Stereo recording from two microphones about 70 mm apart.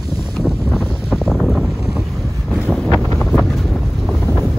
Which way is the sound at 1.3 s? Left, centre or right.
Centre.